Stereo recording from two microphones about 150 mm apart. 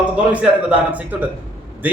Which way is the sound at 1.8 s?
10° right (ahead or behind).